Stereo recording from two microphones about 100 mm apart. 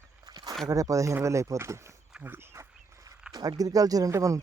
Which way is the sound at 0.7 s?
35° right (ahead or behind).